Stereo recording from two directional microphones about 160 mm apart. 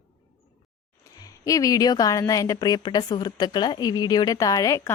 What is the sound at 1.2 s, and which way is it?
A woman's voice, 20° left (ahead or behind).